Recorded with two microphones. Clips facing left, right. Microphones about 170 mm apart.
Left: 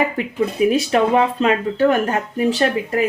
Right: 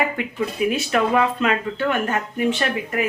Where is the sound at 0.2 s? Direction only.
35° left (ahead or behind).